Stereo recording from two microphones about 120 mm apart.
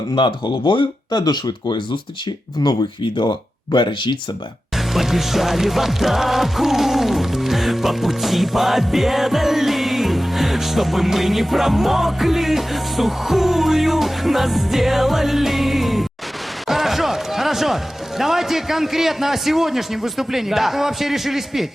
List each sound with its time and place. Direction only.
0.2 s speech: 40° left (ahead or behind)
4.9 s music: centre (ahead or behind)
16.6 s a sound: centre (ahead or behind)
18.2 s a man's voice: centre (ahead or behind)